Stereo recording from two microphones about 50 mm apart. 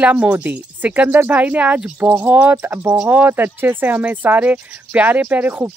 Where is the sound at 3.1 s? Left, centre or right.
Right.